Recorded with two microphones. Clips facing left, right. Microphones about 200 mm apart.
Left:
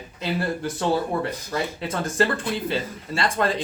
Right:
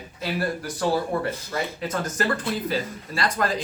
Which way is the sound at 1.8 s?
30° left (ahead or behind).